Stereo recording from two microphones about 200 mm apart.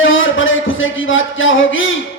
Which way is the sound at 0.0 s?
75° left (ahead or behind).